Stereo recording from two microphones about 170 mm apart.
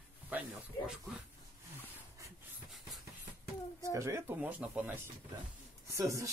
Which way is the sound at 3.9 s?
15° right (ahead or behind).